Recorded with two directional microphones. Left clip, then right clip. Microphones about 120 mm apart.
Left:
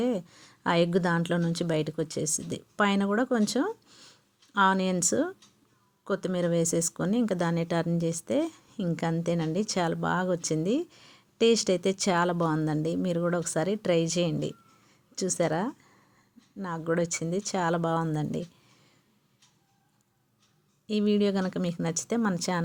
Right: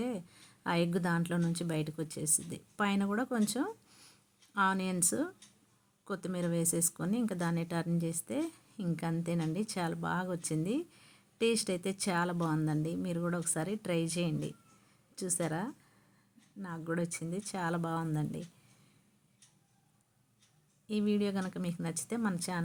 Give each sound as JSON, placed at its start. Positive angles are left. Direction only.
{"t": 0.0, "sound": "a woman's voice", "side_deg": 30}
{"t": 20.8, "sound": "a woman's voice", "side_deg": 35}